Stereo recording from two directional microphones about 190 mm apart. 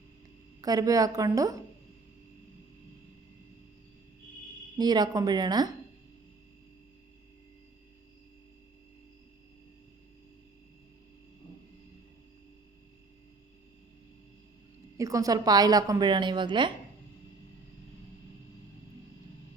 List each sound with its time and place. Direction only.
0.6 s a woman's voice: 20° right (ahead or behind)
4.8 s a woman's voice: 20° right (ahead or behind)
14.9 s a woman's voice: 15° right (ahead or behind)